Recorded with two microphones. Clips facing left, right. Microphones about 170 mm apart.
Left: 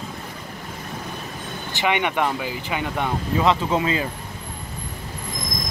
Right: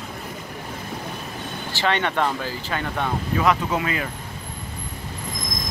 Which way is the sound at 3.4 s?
25° left (ahead or behind).